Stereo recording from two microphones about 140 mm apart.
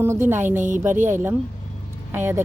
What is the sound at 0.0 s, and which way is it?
Speech, 15° right (ahead or behind).